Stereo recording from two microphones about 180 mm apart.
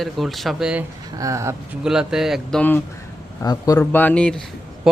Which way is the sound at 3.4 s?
20° left (ahead or behind).